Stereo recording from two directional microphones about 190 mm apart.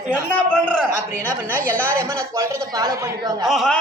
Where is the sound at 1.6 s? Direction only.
10° left (ahead or behind).